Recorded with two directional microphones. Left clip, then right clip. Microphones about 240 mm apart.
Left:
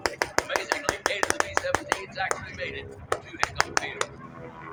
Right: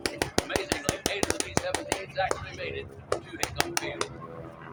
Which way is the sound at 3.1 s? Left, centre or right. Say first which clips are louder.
Left 1 dB; left.